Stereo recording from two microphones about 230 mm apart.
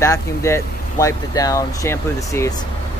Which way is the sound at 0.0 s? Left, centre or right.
Centre.